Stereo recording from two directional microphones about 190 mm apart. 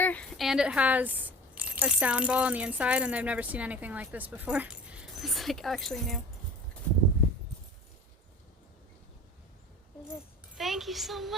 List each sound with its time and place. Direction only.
0.0 s a sound: 5° left (ahead or behind); by 1.1 s 10° right (ahead or behind)
1.5 s speech: 10° right (ahead or behind)
10.6 s a woman's voice: centre (ahead or behind)